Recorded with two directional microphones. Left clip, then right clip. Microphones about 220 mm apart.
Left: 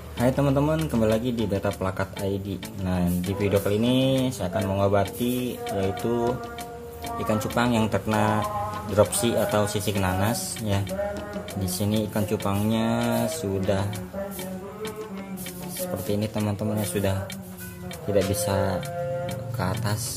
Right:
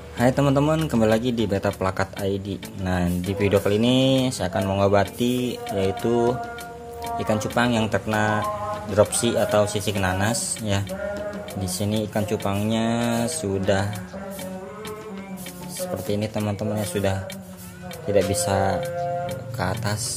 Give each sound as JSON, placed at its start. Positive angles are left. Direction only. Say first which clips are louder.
{"t": 0.2, "sound": "speech", "louder": "right 3 dB", "side_deg": -15}
{"t": 11.6, "sound": "speech", "louder": "right 1 dB", "side_deg": 0}
{"t": 16.1, "sound": "speech", "louder": "right 1 dB", "side_deg": 0}